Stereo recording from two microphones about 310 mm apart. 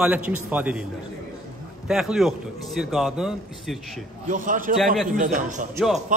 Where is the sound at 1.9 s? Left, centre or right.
Centre.